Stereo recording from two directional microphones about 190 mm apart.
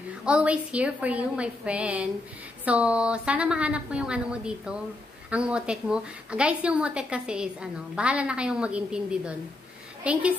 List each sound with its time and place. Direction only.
0.2 s a woman's voice: 5° right (ahead or behind)